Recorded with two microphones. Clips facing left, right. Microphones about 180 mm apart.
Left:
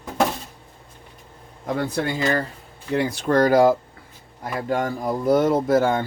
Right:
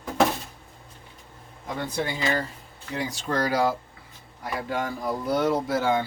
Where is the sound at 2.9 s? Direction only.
60° left (ahead or behind).